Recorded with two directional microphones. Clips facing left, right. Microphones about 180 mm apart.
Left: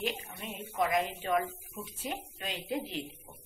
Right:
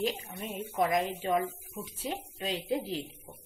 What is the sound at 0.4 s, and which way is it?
Speech, 40° right (ahead or behind).